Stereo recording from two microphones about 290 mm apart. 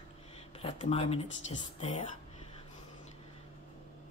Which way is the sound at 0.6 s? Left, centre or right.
Centre.